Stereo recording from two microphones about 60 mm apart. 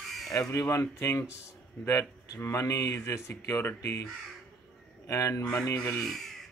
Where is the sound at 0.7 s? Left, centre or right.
Left.